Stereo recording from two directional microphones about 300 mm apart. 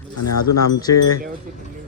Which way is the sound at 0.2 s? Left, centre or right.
Left.